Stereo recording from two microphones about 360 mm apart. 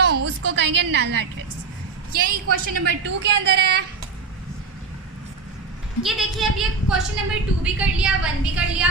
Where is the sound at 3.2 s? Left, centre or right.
Right.